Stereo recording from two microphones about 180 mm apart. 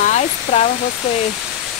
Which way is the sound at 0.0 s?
40° left (ahead or behind).